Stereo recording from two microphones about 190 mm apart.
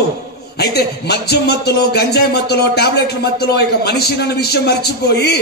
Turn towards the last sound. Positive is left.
turn(degrees=60)  # may be behind; listen again after turning